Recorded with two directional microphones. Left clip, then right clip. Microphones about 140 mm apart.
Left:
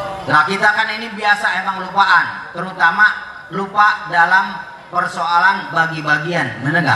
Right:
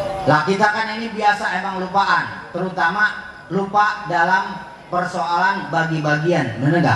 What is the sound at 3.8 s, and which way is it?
A man's voice, 15° right (ahead or behind).